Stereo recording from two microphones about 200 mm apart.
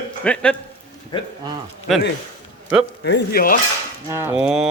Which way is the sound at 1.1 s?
20° left (ahead or behind).